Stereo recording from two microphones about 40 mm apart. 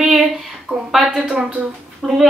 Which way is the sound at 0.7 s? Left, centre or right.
Right.